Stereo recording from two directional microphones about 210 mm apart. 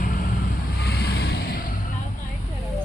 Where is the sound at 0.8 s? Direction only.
50° left (ahead or behind).